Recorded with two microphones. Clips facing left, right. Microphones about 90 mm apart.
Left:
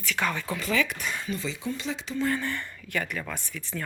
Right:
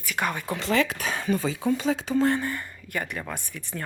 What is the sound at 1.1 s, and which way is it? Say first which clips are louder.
Speech: right 6 dB; 50° right (ahead or behind).